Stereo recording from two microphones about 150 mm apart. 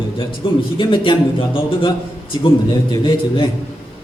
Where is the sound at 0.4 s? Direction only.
35° left (ahead or behind).